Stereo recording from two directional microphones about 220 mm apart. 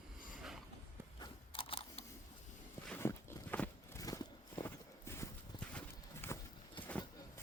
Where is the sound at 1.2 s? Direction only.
25° left (ahead or behind).